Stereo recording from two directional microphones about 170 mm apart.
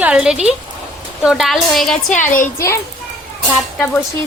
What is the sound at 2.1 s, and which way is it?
Speech, 50° left (ahead or behind).